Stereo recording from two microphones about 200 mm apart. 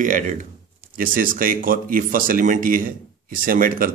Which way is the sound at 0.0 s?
40° right (ahead or behind).